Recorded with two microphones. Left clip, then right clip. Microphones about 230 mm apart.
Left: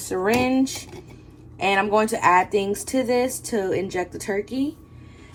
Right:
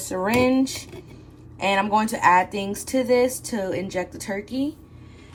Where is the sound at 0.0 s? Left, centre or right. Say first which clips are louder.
Even; centre.